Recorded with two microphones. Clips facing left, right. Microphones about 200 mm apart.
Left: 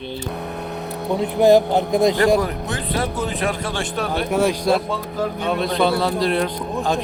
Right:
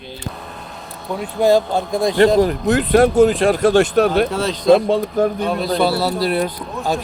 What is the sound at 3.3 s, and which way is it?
Speech, 35° right (ahead or behind).